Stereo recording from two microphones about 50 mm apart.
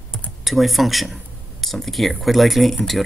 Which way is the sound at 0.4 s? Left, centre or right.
Centre.